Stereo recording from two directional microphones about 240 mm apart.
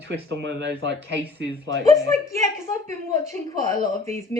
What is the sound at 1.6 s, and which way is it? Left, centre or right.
A woman's voice, centre.